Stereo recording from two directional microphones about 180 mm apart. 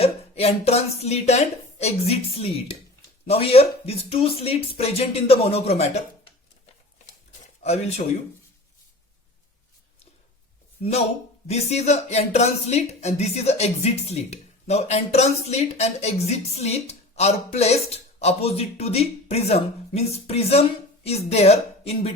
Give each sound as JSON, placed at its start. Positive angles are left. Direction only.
{"t": 0.0, "sound": "a woman's voice", "side_deg": 35}
{"t": 7.6, "sound": "speech", "side_deg": 35}
{"t": 11.4, "sound": "speech", "side_deg": 35}